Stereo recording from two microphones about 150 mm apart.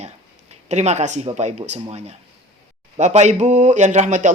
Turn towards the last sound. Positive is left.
turn(degrees=-55)  # may be behind; listen again after turning